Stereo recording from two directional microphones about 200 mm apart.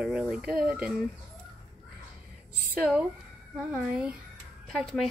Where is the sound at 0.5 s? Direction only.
45° right (ahead or behind).